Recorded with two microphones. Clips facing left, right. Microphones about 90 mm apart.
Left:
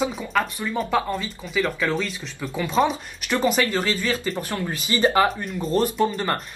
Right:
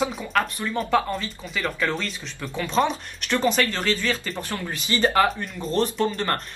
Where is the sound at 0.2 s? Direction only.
Centre (ahead or behind); by 5.3 s 15° left (ahead or behind).